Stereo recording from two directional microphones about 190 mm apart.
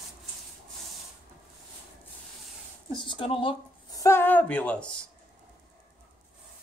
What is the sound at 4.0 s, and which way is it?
Speech, 15° left (ahead or behind).